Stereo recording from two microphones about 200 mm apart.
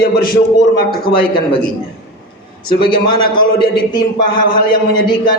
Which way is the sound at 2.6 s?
25° left (ahead or behind).